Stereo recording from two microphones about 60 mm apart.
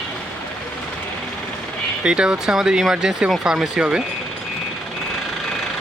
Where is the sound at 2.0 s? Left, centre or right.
Centre.